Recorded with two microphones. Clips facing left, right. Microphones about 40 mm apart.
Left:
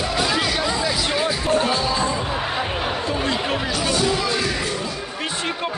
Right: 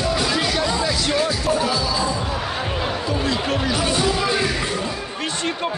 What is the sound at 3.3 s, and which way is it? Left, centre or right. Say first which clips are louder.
Chatter: right 1 dB; centre.